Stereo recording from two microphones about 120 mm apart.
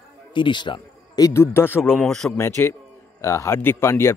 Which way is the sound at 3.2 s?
20° left (ahead or behind).